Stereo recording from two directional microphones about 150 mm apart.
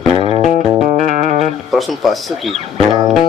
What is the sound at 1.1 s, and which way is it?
Music, 55° right (ahead or behind).